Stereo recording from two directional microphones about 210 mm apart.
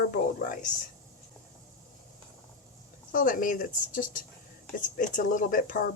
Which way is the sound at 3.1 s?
40° left (ahead or behind).